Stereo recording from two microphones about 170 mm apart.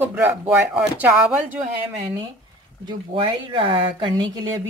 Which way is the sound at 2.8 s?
25° right (ahead or behind).